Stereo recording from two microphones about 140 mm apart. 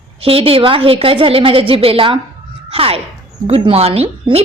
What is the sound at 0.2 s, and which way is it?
A woman's voice, 40° right (ahead or behind).